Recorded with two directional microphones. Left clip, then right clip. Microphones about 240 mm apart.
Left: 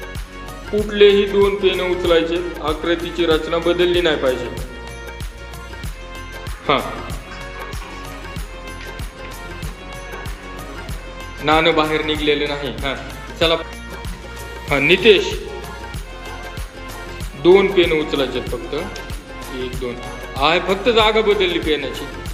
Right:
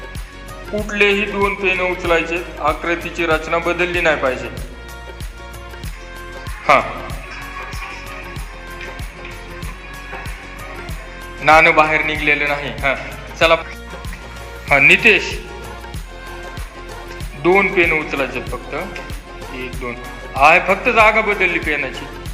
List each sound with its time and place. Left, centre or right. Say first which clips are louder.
0.9 s a man's voice: left 3 dB; centre
11.4 s a man's voice: right 5 dB; centre
14.7 s a man's voice: right 2 dB; centre
17.4 s a man's voice: left 1 dB; centre
19.8 s a man's voice: left 1 dB; centre